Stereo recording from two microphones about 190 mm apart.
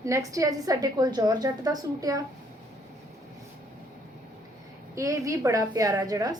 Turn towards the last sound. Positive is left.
turn(degrees=-20)  # may be behind; listen again after turning